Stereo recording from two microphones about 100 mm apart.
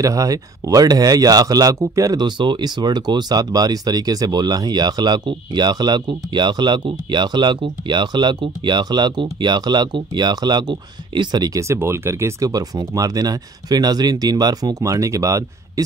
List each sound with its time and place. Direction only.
0.0 s speech: 35° right (ahead or behind)
2.2 s speech: 50° right (ahead or behind); by 15.8 s 35° right (ahead or behind)